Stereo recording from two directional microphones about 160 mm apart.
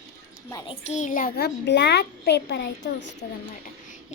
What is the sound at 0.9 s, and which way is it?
Speech, 50° left (ahead or behind).